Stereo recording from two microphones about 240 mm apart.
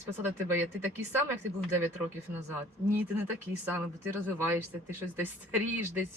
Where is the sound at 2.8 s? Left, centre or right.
Centre.